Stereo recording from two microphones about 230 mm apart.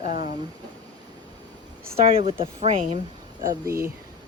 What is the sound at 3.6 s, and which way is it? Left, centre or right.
Speech, centre.